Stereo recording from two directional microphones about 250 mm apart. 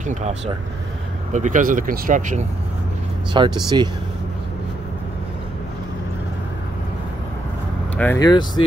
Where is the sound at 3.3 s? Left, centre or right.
Centre.